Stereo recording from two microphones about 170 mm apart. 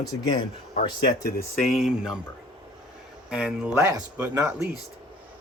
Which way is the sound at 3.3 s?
5° right (ahead or behind).